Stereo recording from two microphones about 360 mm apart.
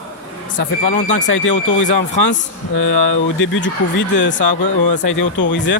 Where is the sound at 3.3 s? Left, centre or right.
Left.